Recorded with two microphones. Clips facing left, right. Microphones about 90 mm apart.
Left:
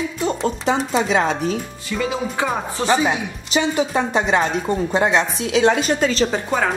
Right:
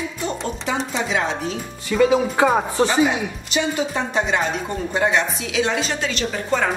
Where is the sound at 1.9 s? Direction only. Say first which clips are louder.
Right 6 dB; 5° right (ahead or behind).